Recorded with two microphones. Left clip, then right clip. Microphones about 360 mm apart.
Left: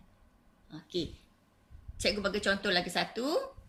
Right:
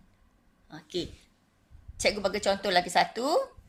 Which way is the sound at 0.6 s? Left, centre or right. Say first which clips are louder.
Right 2 dB; centre.